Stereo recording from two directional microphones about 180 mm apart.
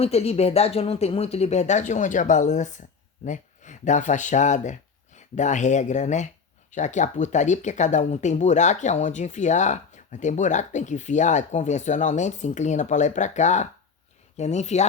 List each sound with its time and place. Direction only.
0.0 s speech: 35° left (ahead or behind)